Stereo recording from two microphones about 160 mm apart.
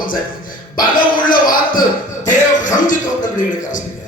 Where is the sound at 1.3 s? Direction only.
60° left (ahead or behind).